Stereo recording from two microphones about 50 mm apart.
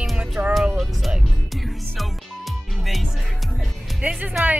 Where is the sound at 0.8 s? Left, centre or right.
Centre.